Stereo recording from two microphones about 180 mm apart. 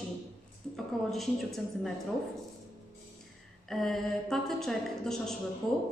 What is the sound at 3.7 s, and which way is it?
A woman's voice, centre (ahead or behind).